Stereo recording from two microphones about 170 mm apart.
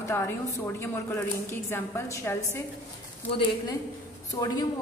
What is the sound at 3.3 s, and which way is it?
Speech, 30° left (ahead or behind).